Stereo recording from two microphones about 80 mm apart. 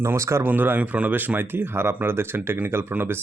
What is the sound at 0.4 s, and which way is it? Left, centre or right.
Speech, right.